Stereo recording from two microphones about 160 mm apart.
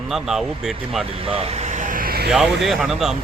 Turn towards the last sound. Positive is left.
turn(degrees=-5)  # may be behind; listen again after turning